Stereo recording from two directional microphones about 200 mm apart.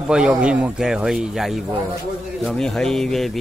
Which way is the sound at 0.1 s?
5° right (ahead or behind).